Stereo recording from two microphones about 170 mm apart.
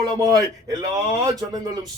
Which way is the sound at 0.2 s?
20° right (ahead or behind).